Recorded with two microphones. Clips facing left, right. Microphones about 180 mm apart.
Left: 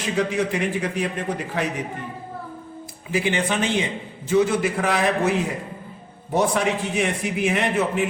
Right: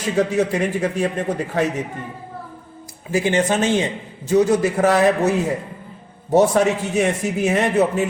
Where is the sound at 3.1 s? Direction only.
45° right (ahead or behind).